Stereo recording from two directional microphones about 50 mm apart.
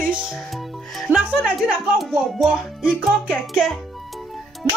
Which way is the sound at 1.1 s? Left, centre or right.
Right.